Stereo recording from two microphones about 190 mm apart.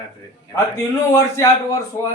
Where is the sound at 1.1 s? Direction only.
20° left (ahead or behind).